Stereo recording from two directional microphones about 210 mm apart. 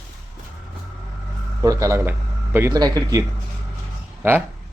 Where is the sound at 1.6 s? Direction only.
15° right (ahead or behind).